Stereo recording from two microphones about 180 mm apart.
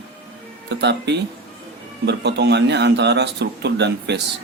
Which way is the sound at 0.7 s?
70° right (ahead or behind).